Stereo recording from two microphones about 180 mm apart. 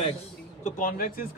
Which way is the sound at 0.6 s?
50° left (ahead or behind).